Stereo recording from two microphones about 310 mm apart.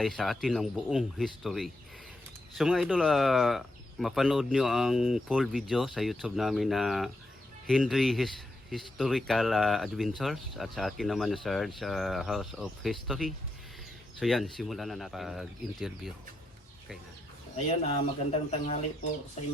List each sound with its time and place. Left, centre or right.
0.0 s speech: centre
18.3 s speech: left